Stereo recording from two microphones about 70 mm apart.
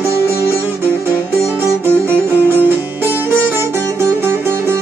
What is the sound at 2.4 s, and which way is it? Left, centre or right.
Music, right.